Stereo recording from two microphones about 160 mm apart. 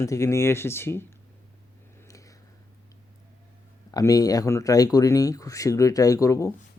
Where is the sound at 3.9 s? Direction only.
20° left (ahead or behind).